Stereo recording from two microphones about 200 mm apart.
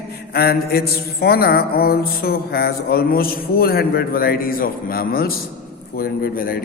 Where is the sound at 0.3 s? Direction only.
50° left (ahead or behind).